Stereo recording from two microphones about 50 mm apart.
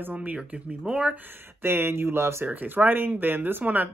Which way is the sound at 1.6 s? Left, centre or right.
Right.